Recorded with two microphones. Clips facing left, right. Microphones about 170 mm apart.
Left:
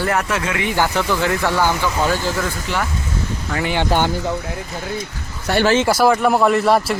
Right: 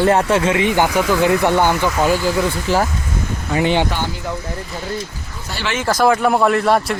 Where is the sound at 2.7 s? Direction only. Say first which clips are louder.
Right 7 dB; 35° right (ahead or behind).